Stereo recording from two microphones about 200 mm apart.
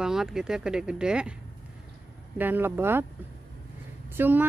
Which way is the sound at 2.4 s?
10° right (ahead or behind).